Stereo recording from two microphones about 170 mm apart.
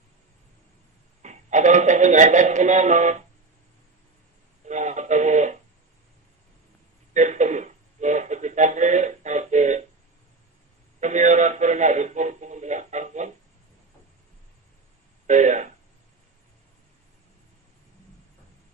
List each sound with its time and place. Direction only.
1.2 s speech: 45° right (ahead or behind)
4.6 s music: 45° right (ahead or behind)
7.1 s a sound: 45° right (ahead or behind)
11.0 s radio: 45° right (ahead or behind)
15.3 s speech: 45° right (ahead or behind)